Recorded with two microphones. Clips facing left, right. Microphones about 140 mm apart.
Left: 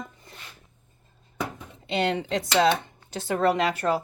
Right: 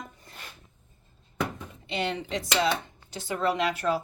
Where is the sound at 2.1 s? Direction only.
75° left (ahead or behind).